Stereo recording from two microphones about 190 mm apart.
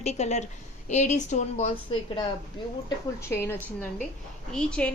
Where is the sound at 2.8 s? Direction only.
15° left (ahead or behind).